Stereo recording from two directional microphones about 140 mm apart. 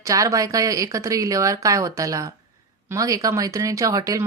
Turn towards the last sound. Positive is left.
turn(degrees=-25)  # may be behind; listen again after turning